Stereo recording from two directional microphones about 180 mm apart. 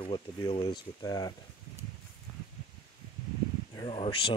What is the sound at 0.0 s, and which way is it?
Speech, 30° left (ahead or behind).